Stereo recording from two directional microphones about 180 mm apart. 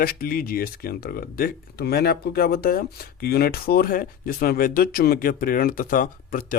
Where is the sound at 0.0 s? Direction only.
55° left (ahead or behind).